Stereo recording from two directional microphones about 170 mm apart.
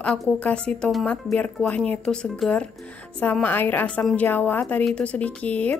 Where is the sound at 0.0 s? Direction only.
5° left (ahead or behind).